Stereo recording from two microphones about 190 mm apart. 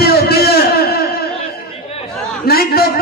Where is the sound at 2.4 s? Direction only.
55° left (ahead or behind).